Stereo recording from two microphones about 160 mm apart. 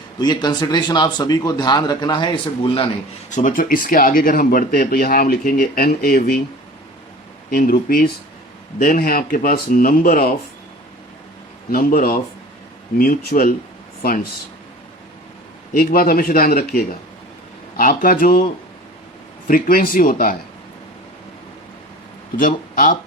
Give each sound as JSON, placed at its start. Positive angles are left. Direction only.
{"t": 0.2, "sound": "speech", "side_deg": 25}
{"t": 3.3, "sound": "speech", "side_deg": 55}
{"t": 7.5, "sound": "speech", "side_deg": 70}
{"t": 11.7, "sound": "speech", "side_deg": 65}
{"t": 15.7, "sound": "speech", "side_deg": 65}
{"t": 19.5, "sound": "speech", "side_deg": 60}
{"t": 22.4, "sound": "speech", "side_deg": 60}